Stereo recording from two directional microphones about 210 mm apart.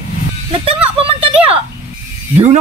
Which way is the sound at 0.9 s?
25° right (ahead or behind).